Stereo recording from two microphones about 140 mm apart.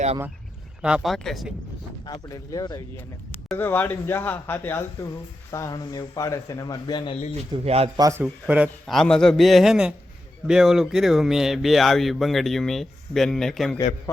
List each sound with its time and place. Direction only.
0.8 s speech: 5° right (ahead or behind)
2.0 s speech: 25° left (ahead or behind)
3.6 s speech: 15° left (ahead or behind); by 7.2 s 30° left (ahead or behind)
7.6 s a man's voice: 45° right (ahead or behind)
8.2 s speech: 10° right (ahead or behind)
8.9 s speech: 5° left (ahead or behind)